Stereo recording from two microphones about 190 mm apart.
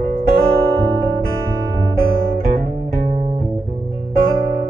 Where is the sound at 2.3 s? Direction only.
45° right (ahead or behind).